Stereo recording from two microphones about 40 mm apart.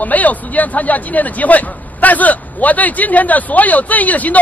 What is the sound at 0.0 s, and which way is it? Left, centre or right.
A man's voice, left.